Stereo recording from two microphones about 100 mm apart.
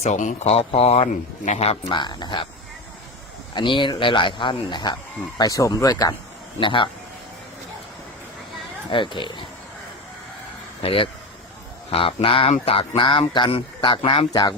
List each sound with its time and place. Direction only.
0.0 s speech: 85° left
1.9 s speech: 50° left (ahead or behind)
3.5 s speech: 55° left (ahead or behind)
5.4 s speech: 35° left (ahead or behind)
6.6 s speech: 55° left (ahead or behind)
8.9 s speech: 55° left (ahead or behind)
10.8 s speech: 60° left (ahead or behind)